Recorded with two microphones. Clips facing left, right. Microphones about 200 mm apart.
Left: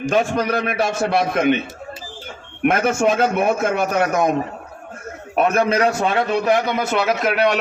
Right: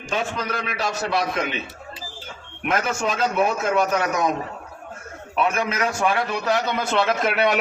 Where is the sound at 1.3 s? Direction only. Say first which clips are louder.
Left 9 dB; 55° left (ahead or behind).